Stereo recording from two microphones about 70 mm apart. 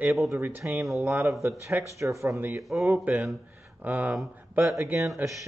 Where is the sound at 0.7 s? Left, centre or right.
Centre.